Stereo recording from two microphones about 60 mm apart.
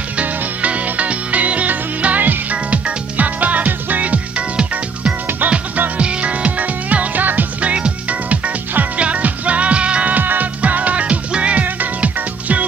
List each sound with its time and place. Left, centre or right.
0.2 s music: right